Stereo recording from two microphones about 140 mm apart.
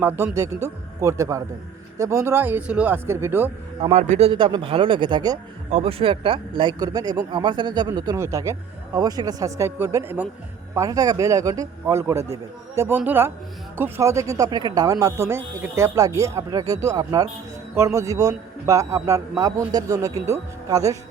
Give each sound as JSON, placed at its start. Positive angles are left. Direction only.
{"t": 0.3, "sound": "a man's voice", "side_deg": -20}
{"t": 3.9, "sound": "speech", "side_deg": -50}
{"t": 5.7, "sound": "a man's voice", "side_deg": -40}